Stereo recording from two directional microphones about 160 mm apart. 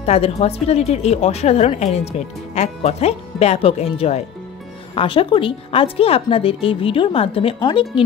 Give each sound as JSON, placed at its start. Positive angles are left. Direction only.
{"t": 0.0, "sound": "a woman's voice", "side_deg": 40}